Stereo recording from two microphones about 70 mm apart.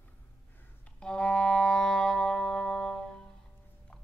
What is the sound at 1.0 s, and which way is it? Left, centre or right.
Music, centre.